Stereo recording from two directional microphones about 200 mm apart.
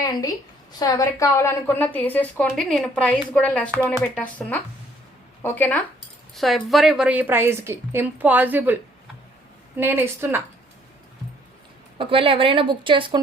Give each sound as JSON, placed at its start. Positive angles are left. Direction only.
{"t": 0.0, "sound": "a woman's voice", "side_deg": 15}
{"t": 11.9, "sound": "a woman's voice", "side_deg": -25}